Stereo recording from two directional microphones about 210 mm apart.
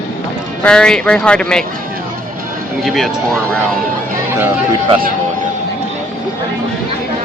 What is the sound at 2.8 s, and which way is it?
Speech, centre (ahead or behind).